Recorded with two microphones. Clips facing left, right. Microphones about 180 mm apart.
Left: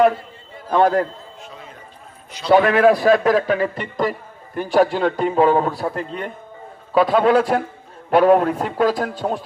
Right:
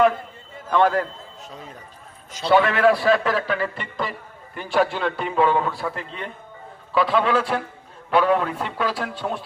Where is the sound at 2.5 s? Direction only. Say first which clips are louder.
Left 4 dB; 40° left (ahead or behind).